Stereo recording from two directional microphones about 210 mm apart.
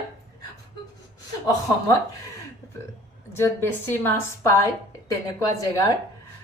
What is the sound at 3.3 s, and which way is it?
A woman's voice, 10° left (ahead or behind).